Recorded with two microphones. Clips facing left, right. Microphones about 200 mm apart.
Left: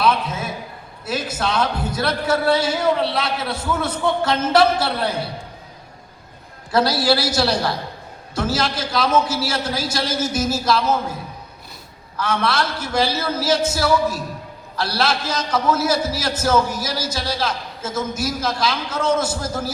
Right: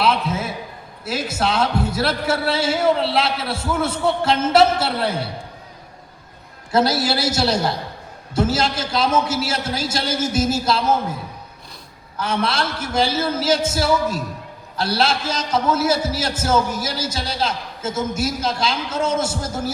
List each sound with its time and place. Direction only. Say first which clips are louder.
0.0 s a sound: even; 25° right (ahead or behind)
1.0 s a man's voice: right 1 dB; 25° right (ahead or behind)
6.7 s a man's voice: left 1 dB; 25° right (ahead or behind)
12.1 s a man's voice: left 1 dB; 30° right (ahead or behind)